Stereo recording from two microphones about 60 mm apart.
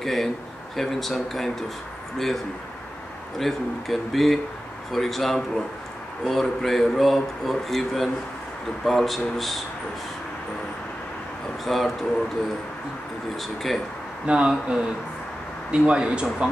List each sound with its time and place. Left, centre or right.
0.0 s speech: centre
11.6 s speech: centre
13.4 s speech: centre
14.2 s speech: centre
15.7 s speech: centre